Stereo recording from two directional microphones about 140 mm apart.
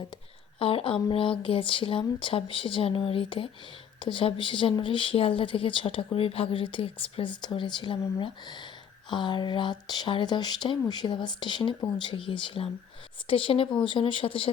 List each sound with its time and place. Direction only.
0.6 s speech: 40° left (ahead or behind)